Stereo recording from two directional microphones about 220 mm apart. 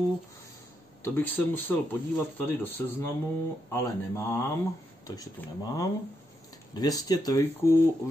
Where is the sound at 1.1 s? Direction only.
10° left (ahead or behind).